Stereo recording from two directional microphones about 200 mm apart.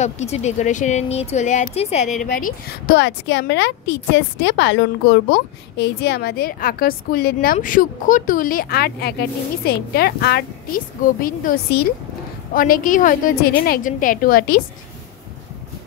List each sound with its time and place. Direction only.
0.0 s speech: 35° left (ahead or behind)
2.1 s a woman's voice: 45° left (ahead or behind)